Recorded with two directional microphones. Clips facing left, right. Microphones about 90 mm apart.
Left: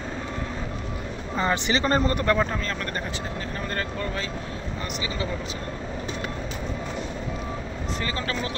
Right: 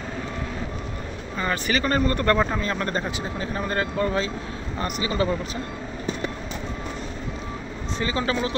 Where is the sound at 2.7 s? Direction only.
25° right (ahead or behind).